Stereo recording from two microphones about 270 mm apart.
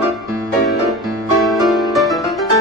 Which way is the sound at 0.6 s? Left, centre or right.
Centre.